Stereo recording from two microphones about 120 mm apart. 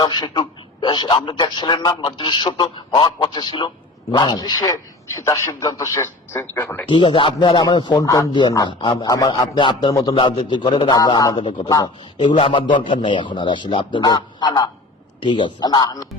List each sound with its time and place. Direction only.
0.0 s a man's voice: 35° left (ahead or behind); by 6.9 s 15° left (ahead or behind)
6.9 s a man's voice: 45° left (ahead or behind)
9.9 s a man's voice: 30° left (ahead or behind)
10.2 s a man's voice: 45° left (ahead or behind)
12.4 s a man's voice: 45° left (ahead or behind)